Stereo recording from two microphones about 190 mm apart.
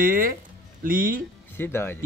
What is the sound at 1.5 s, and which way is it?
Speech, 10° left (ahead or behind).